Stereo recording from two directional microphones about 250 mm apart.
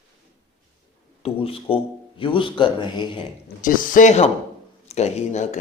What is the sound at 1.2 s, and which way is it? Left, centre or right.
Speech, left.